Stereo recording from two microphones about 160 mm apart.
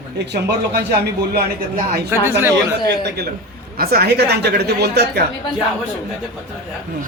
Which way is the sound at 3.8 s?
75° right (ahead or behind).